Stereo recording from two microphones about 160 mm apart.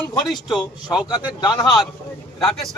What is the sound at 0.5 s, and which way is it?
Speech, 25° left (ahead or behind).